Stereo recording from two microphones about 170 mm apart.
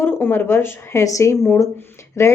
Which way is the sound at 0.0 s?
15° left (ahead or behind).